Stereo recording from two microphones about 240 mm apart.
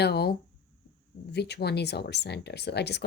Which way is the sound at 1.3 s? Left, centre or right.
Left.